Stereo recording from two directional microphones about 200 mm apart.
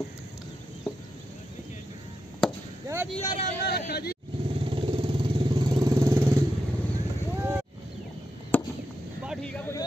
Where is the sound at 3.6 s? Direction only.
50° left (ahead or behind).